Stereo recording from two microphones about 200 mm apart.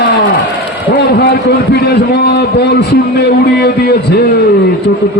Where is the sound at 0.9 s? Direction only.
55° left (ahead or behind).